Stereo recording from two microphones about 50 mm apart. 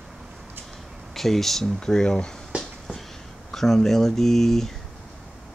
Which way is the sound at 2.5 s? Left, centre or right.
Right.